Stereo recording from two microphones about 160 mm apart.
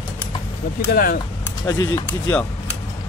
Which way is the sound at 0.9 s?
65° left (ahead or behind).